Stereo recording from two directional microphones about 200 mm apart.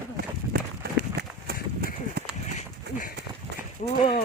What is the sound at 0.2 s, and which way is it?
Run, 50° right (ahead or behind).